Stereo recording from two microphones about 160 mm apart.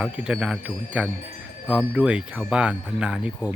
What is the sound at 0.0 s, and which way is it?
A man's voice, 5° right (ahead or behind).